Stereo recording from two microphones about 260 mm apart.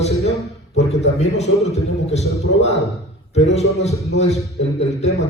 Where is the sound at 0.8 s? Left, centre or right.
Left.